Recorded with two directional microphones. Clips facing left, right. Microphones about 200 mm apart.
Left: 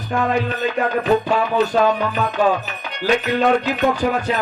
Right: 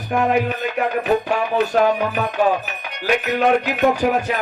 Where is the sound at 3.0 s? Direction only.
10° right (ahead or behind).